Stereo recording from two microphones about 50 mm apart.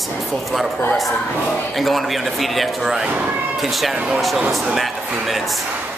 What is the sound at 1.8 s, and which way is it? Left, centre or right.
Speech, centre.